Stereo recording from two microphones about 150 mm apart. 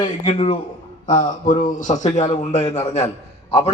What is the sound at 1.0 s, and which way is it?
A man's voice, 60° left (ahead or behind).